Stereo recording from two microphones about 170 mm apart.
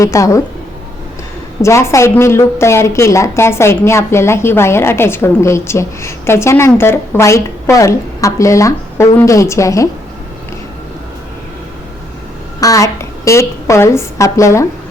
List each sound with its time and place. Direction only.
0.0 s speech: 20° left (ahead or behind)
1.6 s a woman's voice: 15° left (ahead or behind)
12.5 s a woman's voice: 20° left (ahead or behind)